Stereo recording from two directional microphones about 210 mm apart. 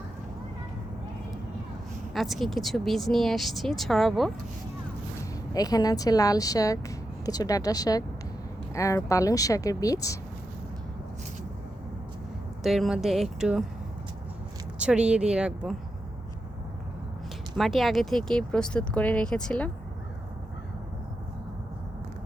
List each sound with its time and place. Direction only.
2.1 s speech: centre (ahead or behind)
5.5 s speech: 15° left (ahead or behind)
12.6 s speech: centre (ahead or behind)
14.8 s speech: 5° right (ahead or behind)
17.6 s speech: centre (ahead or behind)